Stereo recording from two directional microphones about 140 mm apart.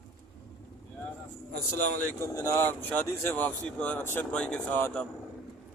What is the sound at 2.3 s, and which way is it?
Speech, 20° left (ahead or behind).